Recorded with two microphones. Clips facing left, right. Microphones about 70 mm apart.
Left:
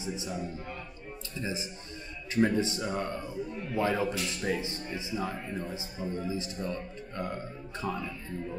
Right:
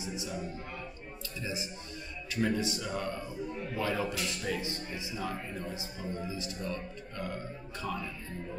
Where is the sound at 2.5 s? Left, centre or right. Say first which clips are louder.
Left 4 dB; left.